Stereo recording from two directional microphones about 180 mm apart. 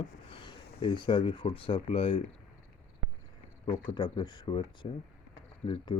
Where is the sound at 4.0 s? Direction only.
25° left (ahead or behind).